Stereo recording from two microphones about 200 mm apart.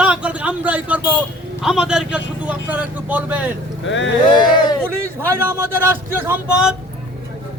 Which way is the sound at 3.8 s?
70° left (ahead or behind).